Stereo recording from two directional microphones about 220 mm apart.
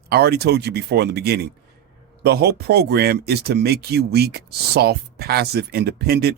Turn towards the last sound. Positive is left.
turn(degrees=-45)  # may be behind; listen again after turning